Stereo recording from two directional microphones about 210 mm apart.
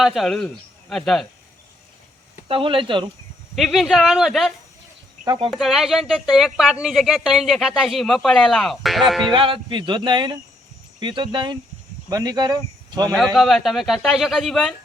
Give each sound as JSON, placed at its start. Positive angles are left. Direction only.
{"t": 0.0, "sound": "speech", "side_deg": 0}
{"t": 2.5, "sound": "speech", "side_deg": -25}
{"t": 3.5, "sound": "speech", "side_deg": 0}
{"t": 5.2, "sound": "speech", "side_deg": -20}
{"t": 5.5, "sound": "speech", "side_deg": 0}
{"t": 9.3, "sound": "speech", "side_deg": -25}
{"t": 13.1, "sound": "speech", "side_deg": 0}